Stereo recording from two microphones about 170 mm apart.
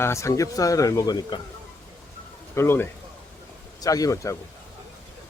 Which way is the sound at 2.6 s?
15° left (ahead or behind).